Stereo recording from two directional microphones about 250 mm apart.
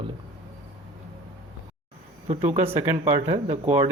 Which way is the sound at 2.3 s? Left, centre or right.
Right.